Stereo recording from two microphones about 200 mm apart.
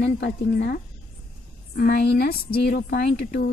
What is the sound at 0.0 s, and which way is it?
Speech, 60° left (ahead or behind).